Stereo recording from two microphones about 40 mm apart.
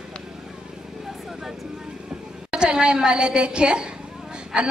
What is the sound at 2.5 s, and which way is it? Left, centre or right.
A woman's voice, right.